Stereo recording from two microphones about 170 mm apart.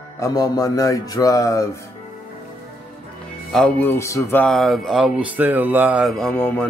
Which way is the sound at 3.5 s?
5° left (ahead or behind).